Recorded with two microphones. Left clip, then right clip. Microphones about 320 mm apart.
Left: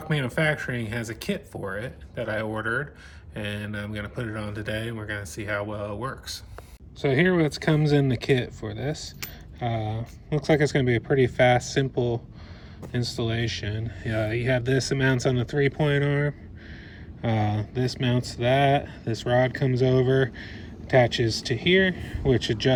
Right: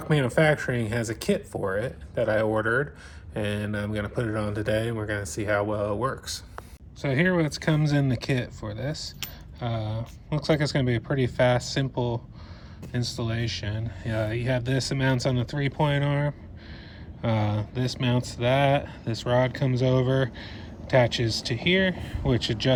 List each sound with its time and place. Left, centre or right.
0.0 s speech: centre
13.2 s speech: centre